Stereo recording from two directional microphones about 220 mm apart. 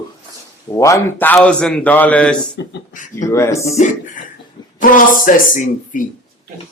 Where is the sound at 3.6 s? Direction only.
30° left (ahead or behind).